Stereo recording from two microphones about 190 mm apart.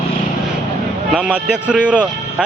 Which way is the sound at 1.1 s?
5° right (ahead or behind).